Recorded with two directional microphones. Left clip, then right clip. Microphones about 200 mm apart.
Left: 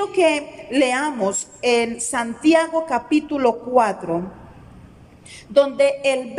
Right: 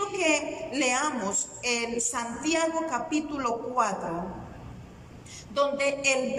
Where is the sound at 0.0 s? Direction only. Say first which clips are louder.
Left 8 dB; 45° left (ahead or behind).